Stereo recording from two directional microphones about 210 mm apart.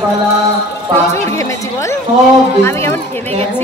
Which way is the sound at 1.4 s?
15° left (ahead or behind).